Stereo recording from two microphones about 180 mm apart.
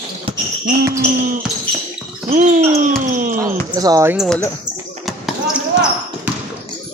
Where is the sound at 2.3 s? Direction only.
45° right (ahead or behind).